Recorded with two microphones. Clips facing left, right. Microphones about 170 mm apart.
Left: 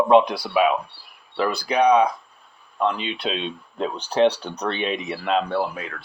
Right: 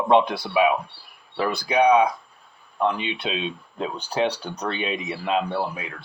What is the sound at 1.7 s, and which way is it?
Speech, 5° right (ahead or behind).